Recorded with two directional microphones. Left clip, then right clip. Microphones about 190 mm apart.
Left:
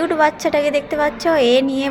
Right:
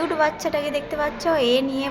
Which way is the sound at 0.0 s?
20° left (ahead or behind).